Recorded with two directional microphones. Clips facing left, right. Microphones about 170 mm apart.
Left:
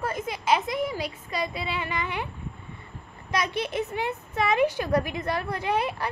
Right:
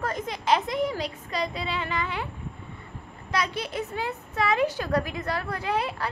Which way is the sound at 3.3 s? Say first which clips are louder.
Left 1 dB; 20° left (ahead or behind).